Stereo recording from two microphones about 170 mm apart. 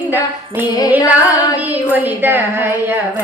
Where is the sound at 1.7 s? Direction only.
10° right (ahead or behind).